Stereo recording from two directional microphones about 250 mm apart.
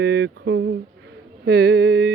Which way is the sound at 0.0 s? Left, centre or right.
Right.